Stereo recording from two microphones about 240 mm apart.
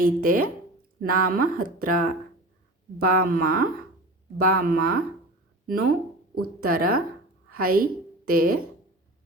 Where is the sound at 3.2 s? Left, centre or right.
Right.